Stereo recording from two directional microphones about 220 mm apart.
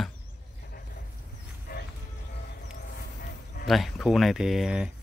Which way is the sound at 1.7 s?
40° left (ahead or behind).